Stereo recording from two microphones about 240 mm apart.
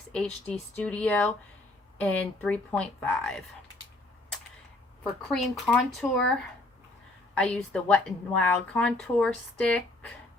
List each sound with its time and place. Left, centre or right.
0.1 s a woman's voice: centre
5.3 s a woman's voice: centre